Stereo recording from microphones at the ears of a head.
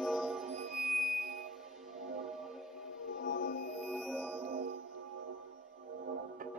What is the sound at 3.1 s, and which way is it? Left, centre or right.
Music, left.